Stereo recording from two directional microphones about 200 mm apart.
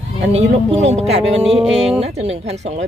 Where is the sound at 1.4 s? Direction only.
Centre (ahead or behind).